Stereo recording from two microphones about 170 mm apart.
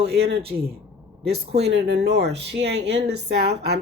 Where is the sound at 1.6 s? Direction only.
85° right.